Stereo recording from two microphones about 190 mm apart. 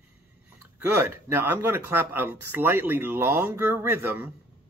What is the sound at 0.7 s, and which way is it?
Mantra, 10° right (ahead or behind).